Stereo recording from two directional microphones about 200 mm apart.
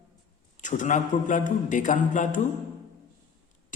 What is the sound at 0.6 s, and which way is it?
A man's voice, 40° left (ahead or behind).